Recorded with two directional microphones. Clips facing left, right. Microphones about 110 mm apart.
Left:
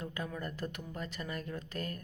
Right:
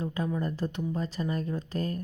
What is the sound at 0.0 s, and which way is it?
Speech, 30° right (ahead or behind).